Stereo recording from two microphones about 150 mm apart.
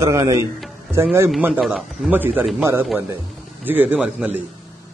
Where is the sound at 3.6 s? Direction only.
10° right (ahead or behind).